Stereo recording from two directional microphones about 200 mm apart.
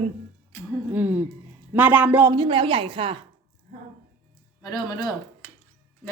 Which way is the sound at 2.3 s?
25° right (ahead or behind).